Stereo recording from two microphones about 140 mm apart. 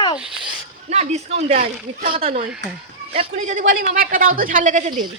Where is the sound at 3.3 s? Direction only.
60° right (ahead or behind).